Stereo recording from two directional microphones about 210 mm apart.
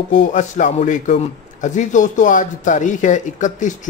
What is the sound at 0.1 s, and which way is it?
Speech, 35° left (ahead or behind).